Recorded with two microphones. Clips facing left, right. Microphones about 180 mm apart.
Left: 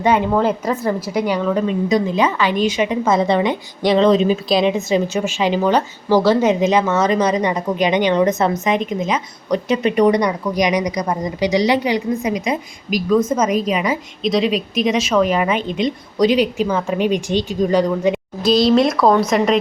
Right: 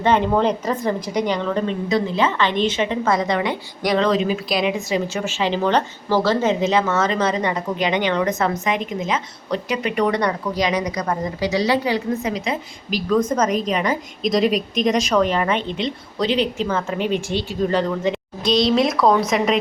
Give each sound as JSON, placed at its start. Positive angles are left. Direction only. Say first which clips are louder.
{"t": 0.0, "sound": "a woman's voice", "louder": "left 2 dB", "side_deg": 10}